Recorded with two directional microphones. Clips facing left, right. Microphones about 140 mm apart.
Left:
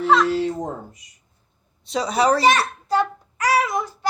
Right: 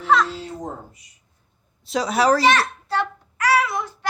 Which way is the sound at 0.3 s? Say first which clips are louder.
Left 11 dB; 70° left (ahead or behind).